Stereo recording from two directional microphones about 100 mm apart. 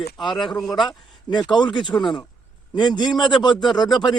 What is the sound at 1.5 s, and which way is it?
Speech, 50° left (ahead or behind).